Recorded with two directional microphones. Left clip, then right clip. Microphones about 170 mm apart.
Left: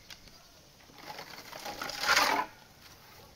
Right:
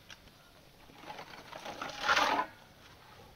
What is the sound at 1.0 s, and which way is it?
Sewing machine, 10° left (ahead or behind).